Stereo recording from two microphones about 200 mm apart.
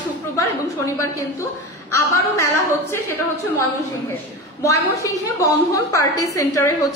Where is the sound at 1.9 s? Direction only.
15° left (ahead or behind).